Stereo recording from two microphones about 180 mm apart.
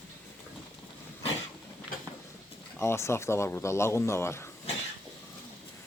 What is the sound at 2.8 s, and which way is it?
Speech, 15° left (ahead or behind).